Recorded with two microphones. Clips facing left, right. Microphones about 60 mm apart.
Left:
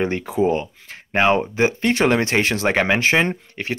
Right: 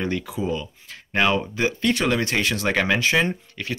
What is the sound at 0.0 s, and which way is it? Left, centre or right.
Speech, left.